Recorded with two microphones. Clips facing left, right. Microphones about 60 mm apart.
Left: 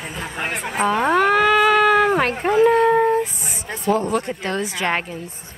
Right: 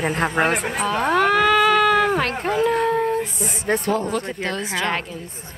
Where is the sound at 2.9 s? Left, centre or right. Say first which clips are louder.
Left 4 dB; left.